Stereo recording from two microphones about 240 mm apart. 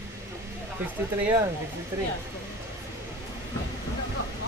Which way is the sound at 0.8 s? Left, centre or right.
Centre.